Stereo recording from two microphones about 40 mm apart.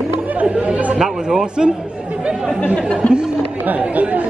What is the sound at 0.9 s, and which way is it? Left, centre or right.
Speech, centre.